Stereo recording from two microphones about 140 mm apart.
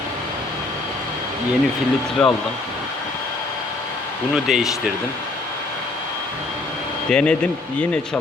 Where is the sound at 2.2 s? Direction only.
5° left (ahead or behind).